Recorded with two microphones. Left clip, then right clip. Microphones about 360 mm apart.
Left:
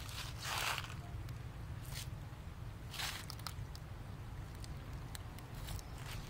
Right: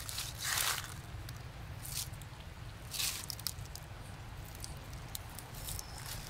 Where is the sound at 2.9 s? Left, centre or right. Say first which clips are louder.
Right 4 dB; left.